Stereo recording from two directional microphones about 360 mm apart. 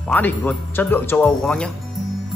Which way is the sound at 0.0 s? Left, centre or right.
Centre.